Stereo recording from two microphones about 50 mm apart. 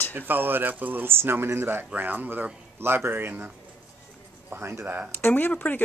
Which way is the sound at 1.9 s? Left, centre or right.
Right.